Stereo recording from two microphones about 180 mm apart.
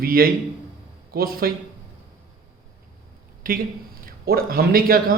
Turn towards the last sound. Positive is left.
turn(degrees=-55)  # may be behind; listen again after turning